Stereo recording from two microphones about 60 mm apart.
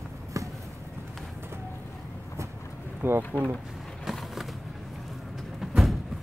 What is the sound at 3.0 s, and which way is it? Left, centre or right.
Speech, right.